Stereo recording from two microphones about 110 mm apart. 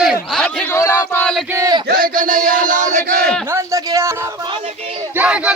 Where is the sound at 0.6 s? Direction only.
25° left (ahead or behind).